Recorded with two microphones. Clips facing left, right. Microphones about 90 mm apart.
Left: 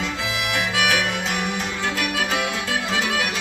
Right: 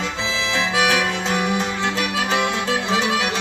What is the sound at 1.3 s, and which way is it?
Music, 25° right (ahead or behind).